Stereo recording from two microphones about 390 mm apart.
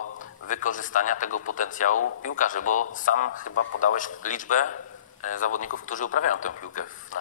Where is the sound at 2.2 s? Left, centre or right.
Centre.